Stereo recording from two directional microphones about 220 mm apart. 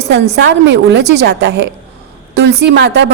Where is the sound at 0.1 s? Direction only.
50° right (ahead or behind).